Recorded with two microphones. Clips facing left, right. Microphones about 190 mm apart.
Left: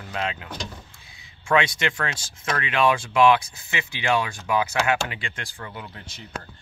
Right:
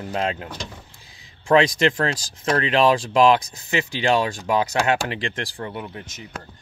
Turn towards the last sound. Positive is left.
turn(degrees=-20)  # may be behind; listen again after turning